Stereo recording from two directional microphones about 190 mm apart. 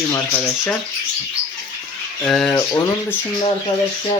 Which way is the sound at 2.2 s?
Centre (ahead or behind).